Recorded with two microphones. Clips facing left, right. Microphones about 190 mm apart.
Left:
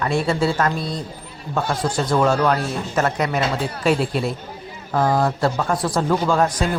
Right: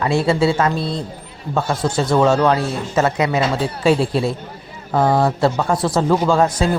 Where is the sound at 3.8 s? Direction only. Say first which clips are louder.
Right 4 dB; 30° right (ahead or behind).